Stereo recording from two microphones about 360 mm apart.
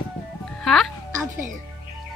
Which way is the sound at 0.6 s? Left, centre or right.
Centre.